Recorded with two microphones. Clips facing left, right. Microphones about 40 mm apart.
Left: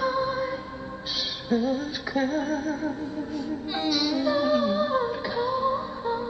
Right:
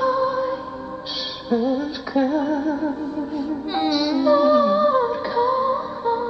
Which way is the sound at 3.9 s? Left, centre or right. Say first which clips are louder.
Right 3 dB; right.